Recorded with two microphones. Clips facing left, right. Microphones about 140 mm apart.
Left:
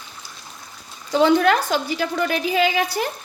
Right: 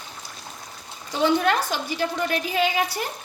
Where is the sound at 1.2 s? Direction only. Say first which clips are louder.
Left 4 dB; 90° left.